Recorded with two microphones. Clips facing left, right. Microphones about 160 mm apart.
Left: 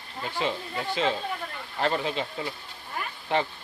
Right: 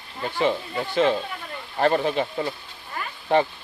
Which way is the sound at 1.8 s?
50° right (ahead or behind).